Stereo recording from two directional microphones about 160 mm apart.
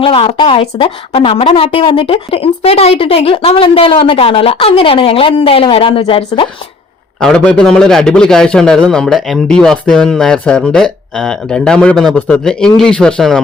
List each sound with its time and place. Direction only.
0.0 s a woman's voice: 35° left (ahead or behind)
7.2 s a man's voice: 5° left (ahead or behind)